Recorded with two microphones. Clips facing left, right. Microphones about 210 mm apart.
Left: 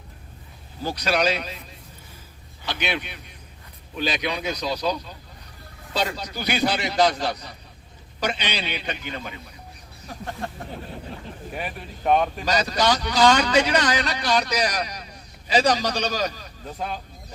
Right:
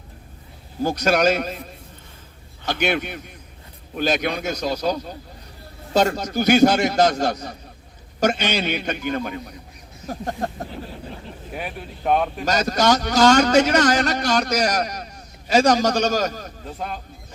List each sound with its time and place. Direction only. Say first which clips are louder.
0.8 s a man's voice: right 5 dB; 45° right (ahead or behind)
2.6 s a man's voice: right 6 dB; 45° right (ahead or behind)
11.5 s speech: right 2 dB; centre (ahead or behind)
12.5 s a man's voice: right 5 dB; 45° right (ahead or behind)
16.7 s speech: even; centre (ahead or behind)